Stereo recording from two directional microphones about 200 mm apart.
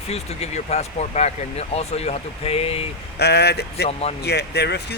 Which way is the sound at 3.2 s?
55° left (ahead or behind).